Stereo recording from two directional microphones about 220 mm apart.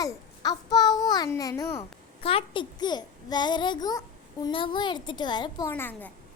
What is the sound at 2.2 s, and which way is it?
A child's voice, 25° left (ahead or behind).